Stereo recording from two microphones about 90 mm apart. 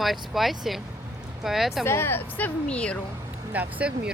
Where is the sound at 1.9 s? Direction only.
25° left (ahead or behind).